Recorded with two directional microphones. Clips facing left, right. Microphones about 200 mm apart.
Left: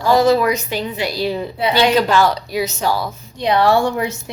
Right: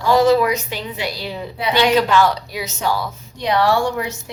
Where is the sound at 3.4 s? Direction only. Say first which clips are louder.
Left 2 dB; 25° left (ahead or behind).